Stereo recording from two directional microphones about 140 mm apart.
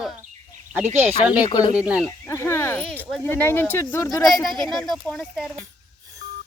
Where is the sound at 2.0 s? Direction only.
20° left (ahead or behind).